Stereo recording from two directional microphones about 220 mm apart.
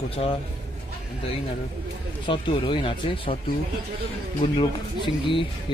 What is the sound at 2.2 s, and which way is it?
Speech, 20° left (ahead or behind).